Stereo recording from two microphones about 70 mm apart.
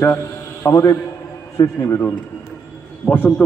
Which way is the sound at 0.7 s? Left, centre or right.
Left.